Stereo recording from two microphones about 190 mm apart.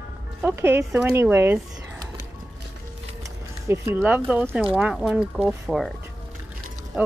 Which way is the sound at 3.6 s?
10° right (ahead or behind).